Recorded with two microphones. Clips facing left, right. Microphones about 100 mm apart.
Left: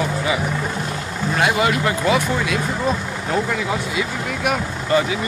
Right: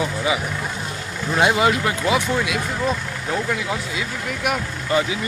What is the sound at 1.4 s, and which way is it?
Speech, 20° right (ahead or behind).